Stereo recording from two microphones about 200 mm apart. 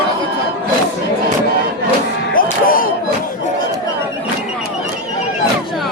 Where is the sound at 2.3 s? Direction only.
45° left (ahead or behind).